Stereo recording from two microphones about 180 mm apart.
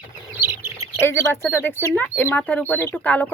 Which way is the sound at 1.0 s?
15° left (ahead or behind).